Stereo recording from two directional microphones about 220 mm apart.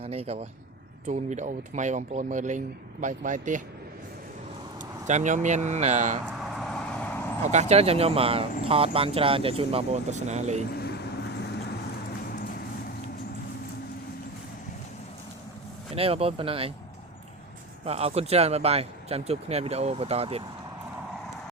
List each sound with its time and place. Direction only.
0.0 s speech: 25° right (ahead or behind)
4.8 s speech: 35° right (ahead or behind)
6.2 s vehicle: centre (ahead or behind)
7.5 s speech: 30° right (ahead or behind)
10.8 s vehicle: 45° left (ahead or behind)
16.0 s speech: 25° right (ahead or behind)
17.8 s speech: 30° right (ahead or behind)